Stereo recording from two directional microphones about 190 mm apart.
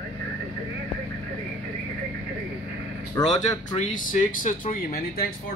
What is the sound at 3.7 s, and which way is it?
Speech, 40° left (ahead or behind).